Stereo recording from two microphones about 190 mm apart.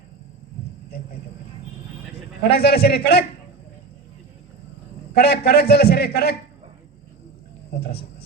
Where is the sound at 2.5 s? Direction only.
55° left (ahead or behind).